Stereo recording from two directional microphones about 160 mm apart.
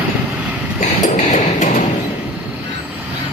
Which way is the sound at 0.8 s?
50° left (ahead or behind).